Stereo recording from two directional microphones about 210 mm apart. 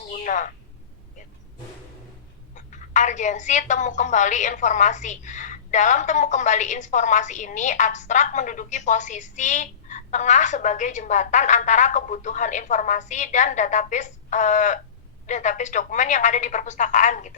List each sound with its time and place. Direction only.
0.1 s a woman's voice: 35° left (ahead or behind)
2.6 s a woman's voice: 35° left (ahead or behind)